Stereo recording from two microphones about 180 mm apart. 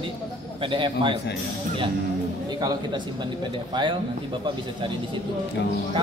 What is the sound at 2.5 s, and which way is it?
Speech, 20° right (ahead or behind).